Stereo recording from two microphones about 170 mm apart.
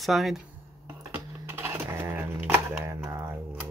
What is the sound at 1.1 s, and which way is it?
Typing, 15° right (ahead or behind).